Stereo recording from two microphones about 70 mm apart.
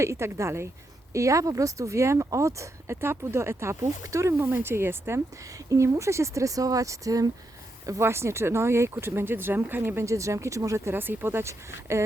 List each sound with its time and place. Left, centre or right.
0.0 s speech: right
4.4 s speech: right
5.6 s speech: right
7.9 s speech: right
10.9 s speech: right